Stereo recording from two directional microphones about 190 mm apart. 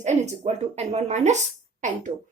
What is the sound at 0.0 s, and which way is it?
Speech, 35° right (ahead or behind).